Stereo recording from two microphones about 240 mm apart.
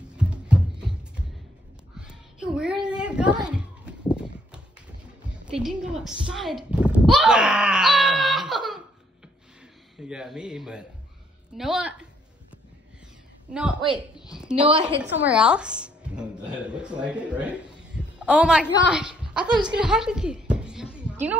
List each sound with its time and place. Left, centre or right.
0.2 s music: centre
2.0 s a sound: centre
3.4 s children playing: centre
5.5 s speech: centre
9.9 s speech: centre
13.5 s a woman's voice: centre
14.7 s a woman's voice: right
15.1 s a woman's voice: centre
18.9 s a sound: centre